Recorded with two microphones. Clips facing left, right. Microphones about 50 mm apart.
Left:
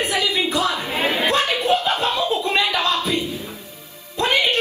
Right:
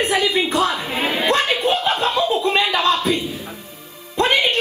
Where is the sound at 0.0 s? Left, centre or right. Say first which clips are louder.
Right 3 dB; right.